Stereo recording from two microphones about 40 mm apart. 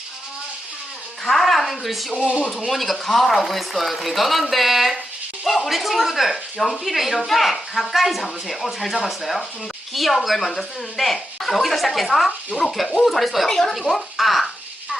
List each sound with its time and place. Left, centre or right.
1.2 s a woman's voice: centre
2.1 s speech: right
2.5 s speech: centre
13.7 s a sound: centre